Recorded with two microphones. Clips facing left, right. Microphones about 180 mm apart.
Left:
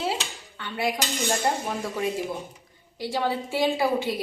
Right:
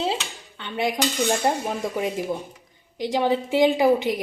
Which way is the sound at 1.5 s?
20° right (ahead or behind).